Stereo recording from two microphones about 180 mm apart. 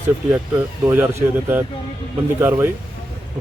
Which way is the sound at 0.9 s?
10° right (ahead or behind).